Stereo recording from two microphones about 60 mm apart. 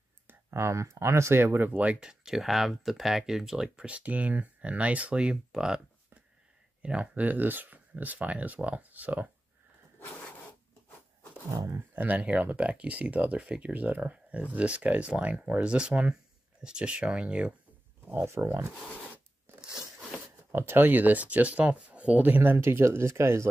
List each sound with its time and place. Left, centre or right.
0.3 s speech: right; by 5.8 s centre
6.8 s speech: centre
7.2 s speech: right
9.9 s dog: left
11.9 s speech: right
18.2 s speech: right
19.5 s biting: right
20.5 s speech: right